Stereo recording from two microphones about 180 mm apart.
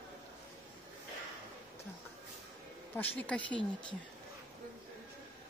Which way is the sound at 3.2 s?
5° left (ahead or behind).